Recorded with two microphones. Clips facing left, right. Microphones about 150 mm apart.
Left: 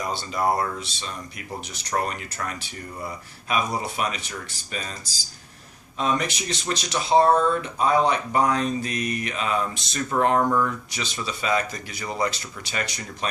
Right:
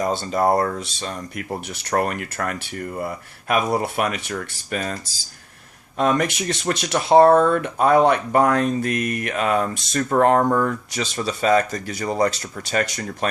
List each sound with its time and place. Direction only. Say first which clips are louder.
0.0 s speech: right 5 dB; 45° right (ahead or behind)
6.0 s speech: right 5 dB; 50° right (ahead or behind)